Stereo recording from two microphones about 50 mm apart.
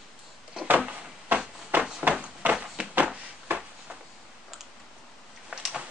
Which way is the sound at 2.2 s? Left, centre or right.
Right.